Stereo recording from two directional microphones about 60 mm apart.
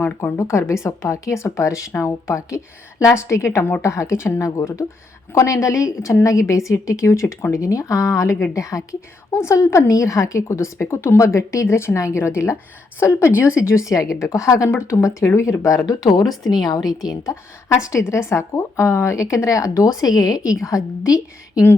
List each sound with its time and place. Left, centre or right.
0.0 s a woman's voice: left
14.3 s speech: left
14.7 s a woman's voice: left
15.9 s a woman's voice: left
17.1 s speech: left